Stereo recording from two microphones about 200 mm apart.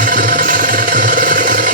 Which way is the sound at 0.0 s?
40° right (ahead or behind).